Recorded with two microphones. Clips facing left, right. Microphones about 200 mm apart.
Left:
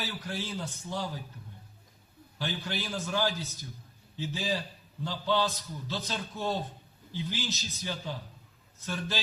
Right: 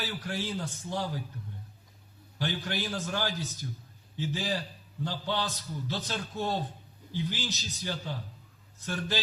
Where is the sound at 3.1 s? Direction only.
15° left (ahead or behind).